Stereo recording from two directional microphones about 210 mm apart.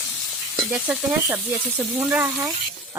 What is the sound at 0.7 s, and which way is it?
Speech, 10° right (ahead or behind).